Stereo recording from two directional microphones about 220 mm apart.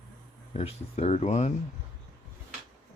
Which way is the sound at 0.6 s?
30° left (ahead or behind).